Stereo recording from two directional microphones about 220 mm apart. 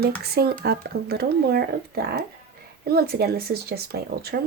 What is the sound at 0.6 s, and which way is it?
Speech, 45° right (ahead or behind).